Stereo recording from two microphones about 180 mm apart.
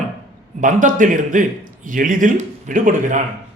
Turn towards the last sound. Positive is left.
turn(degrees=-45)  # may be behind; listen again after turning